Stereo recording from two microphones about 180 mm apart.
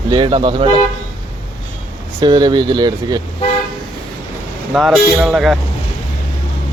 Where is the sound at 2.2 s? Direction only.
25° right (ahead or behind).